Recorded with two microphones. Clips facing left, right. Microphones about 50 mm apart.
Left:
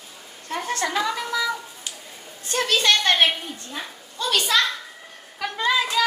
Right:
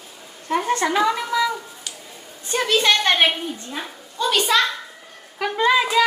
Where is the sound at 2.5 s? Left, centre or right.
Right.